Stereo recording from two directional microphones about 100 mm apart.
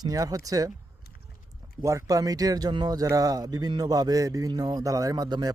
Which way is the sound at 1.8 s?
35° right (ahead or behind).